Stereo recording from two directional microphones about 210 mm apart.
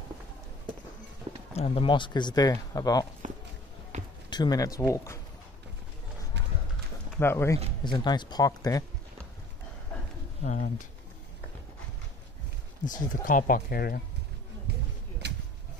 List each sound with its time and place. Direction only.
1.5 s speech: 25° left (ahead or behind)
3.9 s a sound: 35° right (ahead or behind)
4.3 s speech: 20° left (ahead or behind)
7.2 s speech: 10° left (ahead or behind)
10.4 s pigeon: 35° left (ahead or behind)
12.8 s speech: 40° left (ahead or behind)
14.7 s a sound: 55° right (ahead or behind)